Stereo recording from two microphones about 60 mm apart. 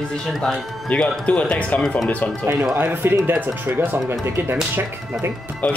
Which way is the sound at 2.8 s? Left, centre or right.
Right.